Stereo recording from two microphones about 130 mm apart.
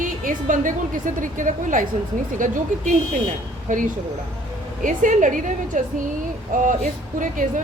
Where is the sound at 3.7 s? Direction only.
90° right.